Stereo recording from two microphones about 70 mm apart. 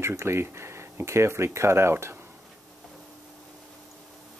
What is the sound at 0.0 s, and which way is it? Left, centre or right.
Speech, right.